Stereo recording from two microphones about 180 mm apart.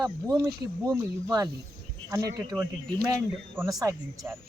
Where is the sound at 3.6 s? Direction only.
20° right (ahead or behind).